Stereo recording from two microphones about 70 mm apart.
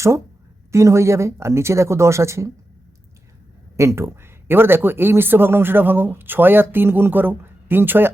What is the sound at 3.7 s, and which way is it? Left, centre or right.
A woman's voice, right.